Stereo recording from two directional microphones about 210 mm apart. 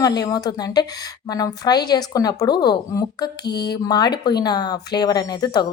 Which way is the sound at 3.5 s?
50° left (ahead or behind).